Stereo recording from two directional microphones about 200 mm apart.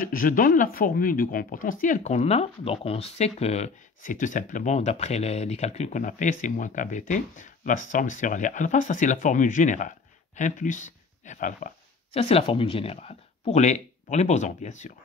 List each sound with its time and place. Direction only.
0.0 s speech: 45° left (ahead or behind)